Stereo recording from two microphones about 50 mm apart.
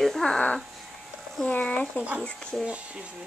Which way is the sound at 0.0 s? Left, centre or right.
Centre.